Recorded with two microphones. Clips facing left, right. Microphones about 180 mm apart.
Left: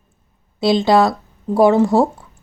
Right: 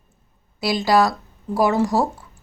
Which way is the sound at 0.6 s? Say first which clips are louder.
Left 4 dB; 25° left (ahead or behind).